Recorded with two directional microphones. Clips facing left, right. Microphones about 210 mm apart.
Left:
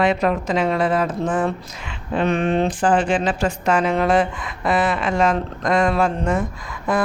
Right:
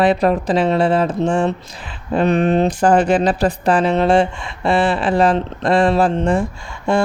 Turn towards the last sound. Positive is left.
turn(degrees=-30)  # may be behind; listen again after turning